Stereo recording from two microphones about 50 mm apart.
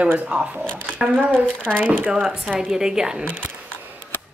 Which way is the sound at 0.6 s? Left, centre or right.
Centre.